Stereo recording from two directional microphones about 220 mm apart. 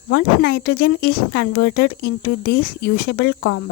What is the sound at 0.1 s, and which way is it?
Speech, 50° left (ahead or behind).